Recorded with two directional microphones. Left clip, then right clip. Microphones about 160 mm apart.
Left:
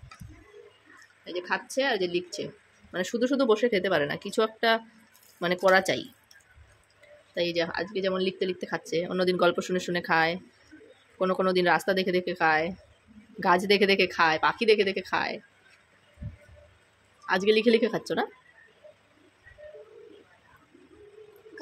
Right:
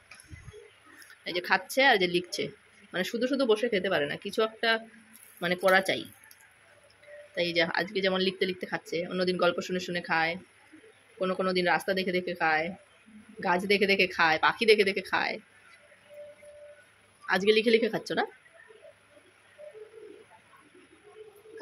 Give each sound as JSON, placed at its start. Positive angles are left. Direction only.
{"t": 1.2, "sound": "speech", "side_deg": 0}
{"t": 2.9, "sound": "speech", "side_deg": 10}
{"t": 7.3, "sound": "speech", "side_deg": 5}
{"t": 17.3, "sound": "speech", "side_deg": 10}